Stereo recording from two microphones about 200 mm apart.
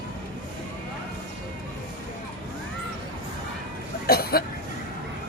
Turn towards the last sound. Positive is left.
turn(degrees=50)  # may be behind; listen again after turning